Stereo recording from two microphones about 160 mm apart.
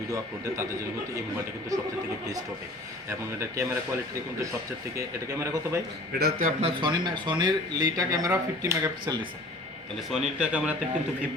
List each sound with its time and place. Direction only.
1.7 s speech: 20° right (ahead or behind)
3.1 s speech: 15° right (ahead or behind)
4.9 s speech: 15° right (ahead or behind)
6.1 s a man's voice: 75° right (ahead or behind)
6.6 s speech: 35° right (ahead or behind)
10.1 s speech: 5° right (ahead or behind)